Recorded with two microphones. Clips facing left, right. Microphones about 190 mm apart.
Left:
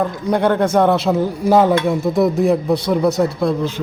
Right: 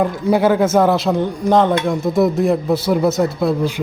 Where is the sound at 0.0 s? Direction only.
5° right (ahead or behind).